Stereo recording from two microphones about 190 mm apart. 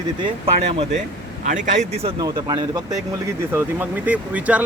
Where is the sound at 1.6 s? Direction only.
35° right (ahead or behind).